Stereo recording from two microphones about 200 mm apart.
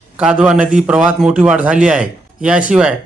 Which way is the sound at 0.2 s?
5° right (ahead or behind).